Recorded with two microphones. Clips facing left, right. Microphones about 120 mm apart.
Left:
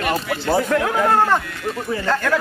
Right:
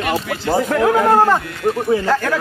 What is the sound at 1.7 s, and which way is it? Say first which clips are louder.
Speech: right 9 dB; 55° right (ahead or behind).